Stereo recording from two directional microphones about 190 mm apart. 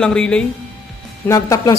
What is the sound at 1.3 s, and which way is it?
Speech, 15° left (ahead or behind).